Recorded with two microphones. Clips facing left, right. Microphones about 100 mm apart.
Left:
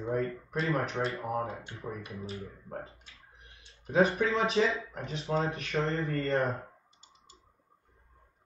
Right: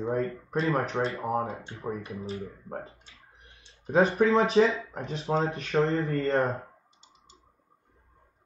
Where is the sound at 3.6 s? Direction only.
30° right (ahead or behind).